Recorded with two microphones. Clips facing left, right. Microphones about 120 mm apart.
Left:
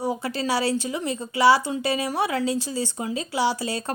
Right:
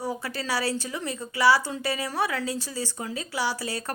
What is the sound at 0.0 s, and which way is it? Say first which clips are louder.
A woman's voice: left 5 dB; 20° left (ahead or behind).